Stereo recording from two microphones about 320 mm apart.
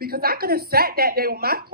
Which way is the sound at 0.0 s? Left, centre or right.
Right.